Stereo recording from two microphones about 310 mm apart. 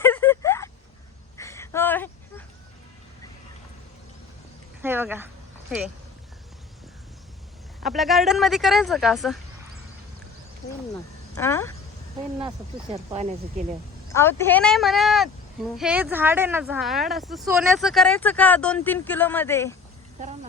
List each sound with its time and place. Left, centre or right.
0.0 s a sound: centre
4.8 s speech: centre
7.9 s speech: centre
11.3 s speech: centre
12.4 s speech: centre
14.1 s speech: centre
20.1 s speech: right